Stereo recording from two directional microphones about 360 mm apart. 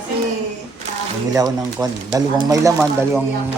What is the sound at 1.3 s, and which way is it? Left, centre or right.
Speech, centre.